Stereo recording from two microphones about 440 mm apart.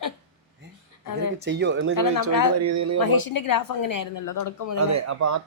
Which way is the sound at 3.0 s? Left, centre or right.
Left.